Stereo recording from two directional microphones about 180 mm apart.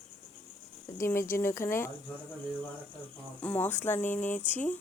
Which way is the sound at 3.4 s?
10° left (ahead or behind).